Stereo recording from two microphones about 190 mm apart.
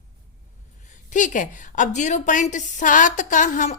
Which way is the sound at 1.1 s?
40° left (ahead or behind).